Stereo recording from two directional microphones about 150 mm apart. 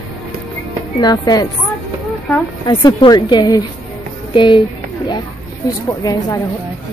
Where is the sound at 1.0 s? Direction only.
25° left (ahead or behind).